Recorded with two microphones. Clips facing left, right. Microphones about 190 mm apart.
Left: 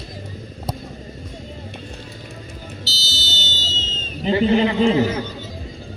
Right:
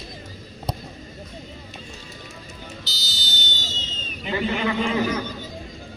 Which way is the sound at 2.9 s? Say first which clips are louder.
Left 5 dB; 15° right (ahead or behind).